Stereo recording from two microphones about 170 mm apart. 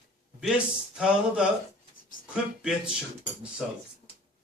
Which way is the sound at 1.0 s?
5° right (ahead or behind).